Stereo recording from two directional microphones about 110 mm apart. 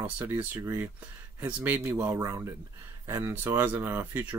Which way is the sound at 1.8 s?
30° right (ahead or behind).